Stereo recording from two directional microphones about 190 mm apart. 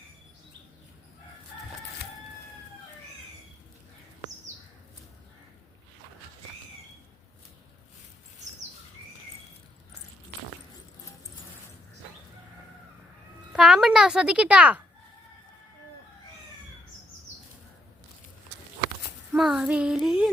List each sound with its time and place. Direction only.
13.5 s a child's voice: 5° right (ahead or behind)
19.3 s child singing: 5° right (ahead or behind)